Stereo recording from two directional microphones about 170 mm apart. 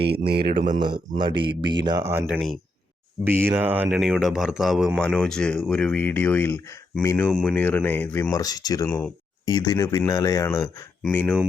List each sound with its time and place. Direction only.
0.0 s speech: 75° right (ahead or behind)
0.8 s speech: 30° right (ahead or behind); by 8.9 s 20° left (ahead or behind)
8.9 s speech: 10° left (ahead or behind)
9.5 s speech: 20° left (ahead or behind)